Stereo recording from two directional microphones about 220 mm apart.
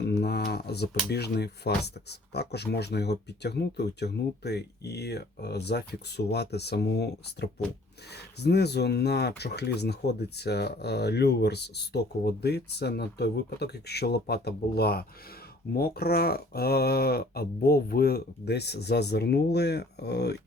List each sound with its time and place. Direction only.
0.2 s speech: 45° left (ahead or behind)